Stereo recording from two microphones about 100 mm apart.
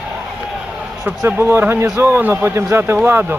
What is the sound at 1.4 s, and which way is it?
A man's voice, 20° right (ahead or behind).